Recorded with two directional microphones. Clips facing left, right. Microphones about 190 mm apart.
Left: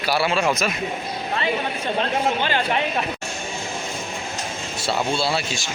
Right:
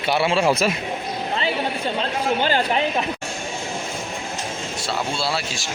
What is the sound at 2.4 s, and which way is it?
Speech, 40° right (ahead or behind).